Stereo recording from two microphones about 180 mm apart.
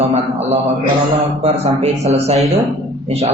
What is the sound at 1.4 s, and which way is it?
Speech, 35° right (ahead or behind).